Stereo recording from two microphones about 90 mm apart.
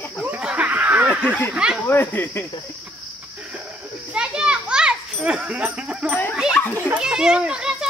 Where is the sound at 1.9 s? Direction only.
25° left (ahead or behind).